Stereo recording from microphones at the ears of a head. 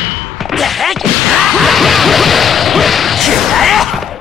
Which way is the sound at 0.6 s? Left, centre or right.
Left.